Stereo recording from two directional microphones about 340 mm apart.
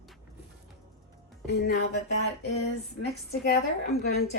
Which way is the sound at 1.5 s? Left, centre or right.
Left.